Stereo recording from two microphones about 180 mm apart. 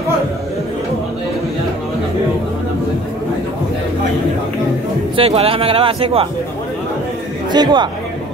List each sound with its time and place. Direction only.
5.1 s speech: 30° right (ahead or behind)
7.5 s speech: 25° right (ahead or behind)